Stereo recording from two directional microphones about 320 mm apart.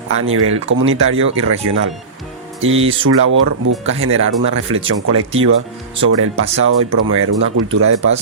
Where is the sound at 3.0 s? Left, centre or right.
Right.